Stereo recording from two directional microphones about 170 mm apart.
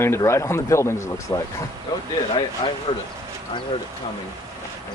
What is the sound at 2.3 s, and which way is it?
Speech, 30° left (ahead or behind).